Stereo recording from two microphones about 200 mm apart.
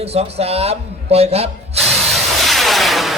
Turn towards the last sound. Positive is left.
turn(degrees=0)  # may be behind; listen again after turning